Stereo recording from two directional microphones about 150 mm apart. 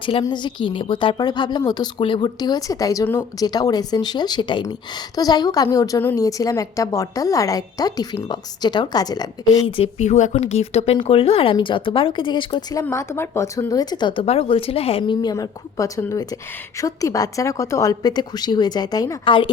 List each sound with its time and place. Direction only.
0.0 s speech: 35° left (ahead or behind)
9.7 s speech: 45° left (ahead or behind)
12.8 s speech: 15° left (ahead or behind)